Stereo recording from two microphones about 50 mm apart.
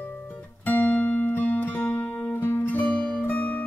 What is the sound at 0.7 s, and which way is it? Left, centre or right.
Music, left.